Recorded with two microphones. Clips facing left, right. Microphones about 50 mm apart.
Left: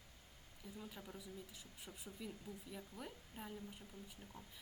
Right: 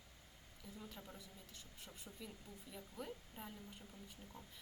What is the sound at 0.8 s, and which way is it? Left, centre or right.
A woman's voice, centre.